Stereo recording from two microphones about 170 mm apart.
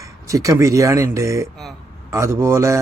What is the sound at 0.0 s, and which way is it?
A man's voice, 20° right (ahead or behind).